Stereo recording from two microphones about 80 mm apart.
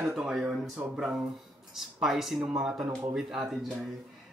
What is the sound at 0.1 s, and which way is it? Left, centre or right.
Speech, centre.